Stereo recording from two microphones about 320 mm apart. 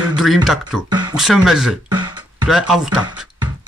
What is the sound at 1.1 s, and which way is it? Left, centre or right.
Speech, centre.